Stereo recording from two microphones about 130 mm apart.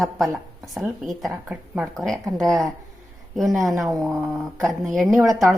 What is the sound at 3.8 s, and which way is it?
Speech, centre (ahead or behind).